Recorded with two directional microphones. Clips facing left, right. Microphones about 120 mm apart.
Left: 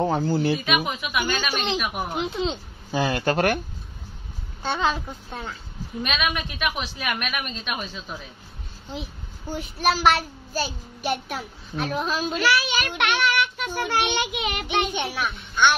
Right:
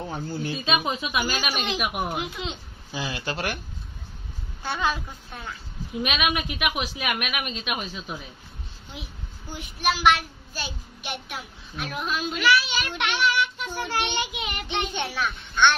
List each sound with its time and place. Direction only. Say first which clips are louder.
0.0 s speech: left 9 dB; 90° left
0.7 s speech: left 1 dB; 25° right (ahead or behind)
1.8 s a woman's voice: even; 10° right (ahead or behind)
2.2 s a child's voice: left 7 dB; 30° left (ahead or behind)
2.9 s speech: left 8 dB; 50° left (ahead or behind)
4.6 s a child's voice: left 3 dB; 25° left (ahead or behind)
6.0 s a woman's voice: right 1 dB; 10° right (ahead or behind)
9.5 s a child's voice: left 3 dB; 35° left (ahead or behind)
12.5 s a child's voice: left 2 dB; 60° left (ahead or behind)
14.9 s a child's voice: left 1 dB; 15° left (ahead or behind)